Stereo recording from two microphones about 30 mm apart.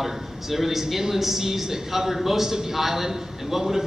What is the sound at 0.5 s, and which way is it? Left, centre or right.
A man's voice, centre.